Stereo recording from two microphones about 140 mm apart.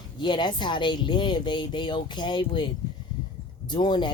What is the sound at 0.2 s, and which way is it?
Speech, 35° left (ahead or behind).